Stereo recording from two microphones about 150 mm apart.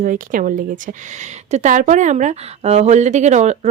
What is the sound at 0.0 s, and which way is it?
Speech, 65° right (ahead or behind).